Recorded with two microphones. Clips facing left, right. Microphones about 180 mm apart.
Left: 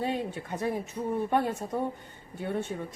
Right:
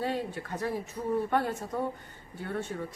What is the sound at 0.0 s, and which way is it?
A woman's voice, 20° left (ahead or behind).